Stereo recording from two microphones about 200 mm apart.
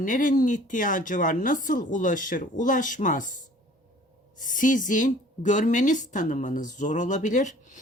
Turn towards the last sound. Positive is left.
turn(degrees=40)  # may be behind; listen again after turning